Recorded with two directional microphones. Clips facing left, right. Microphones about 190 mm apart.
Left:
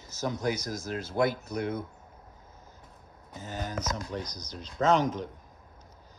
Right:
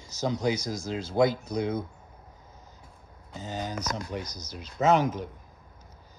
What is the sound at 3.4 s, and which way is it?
Speech, 15° right (ahead or behind).